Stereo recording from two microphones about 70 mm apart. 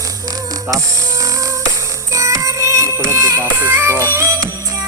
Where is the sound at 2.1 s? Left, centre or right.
Right.